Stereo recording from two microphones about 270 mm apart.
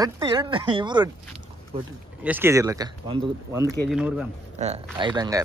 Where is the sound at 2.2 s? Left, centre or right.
Centre.